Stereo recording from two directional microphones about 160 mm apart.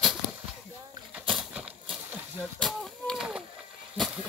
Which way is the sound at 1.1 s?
5° right (ahead or behind).